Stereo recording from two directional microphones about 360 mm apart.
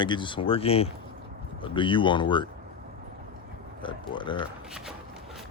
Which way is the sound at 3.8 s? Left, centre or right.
Centre.